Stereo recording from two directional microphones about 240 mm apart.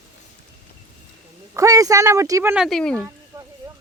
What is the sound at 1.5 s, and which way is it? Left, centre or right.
Speech, centre.